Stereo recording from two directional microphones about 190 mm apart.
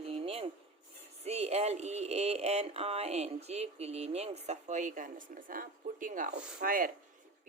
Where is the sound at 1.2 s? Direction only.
35° right (ahead or behind).